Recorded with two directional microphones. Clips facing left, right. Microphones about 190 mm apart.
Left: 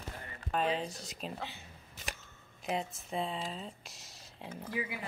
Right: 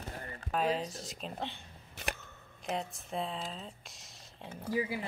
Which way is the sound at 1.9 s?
60° right (ahead or behind).